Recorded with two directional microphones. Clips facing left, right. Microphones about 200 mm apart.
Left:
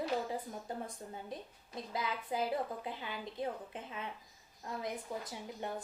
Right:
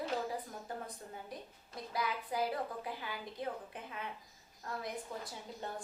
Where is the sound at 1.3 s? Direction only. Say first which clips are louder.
Left 3 dB; 25° left (ahead or behind).